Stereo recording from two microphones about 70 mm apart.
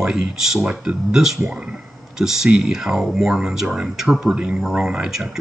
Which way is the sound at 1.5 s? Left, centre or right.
Centre.